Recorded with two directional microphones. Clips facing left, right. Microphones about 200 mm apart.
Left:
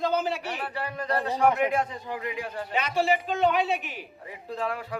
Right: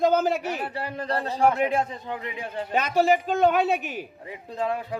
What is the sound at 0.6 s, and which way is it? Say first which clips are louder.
A man's voice: right 1 dB; 25° right (ahead or behind).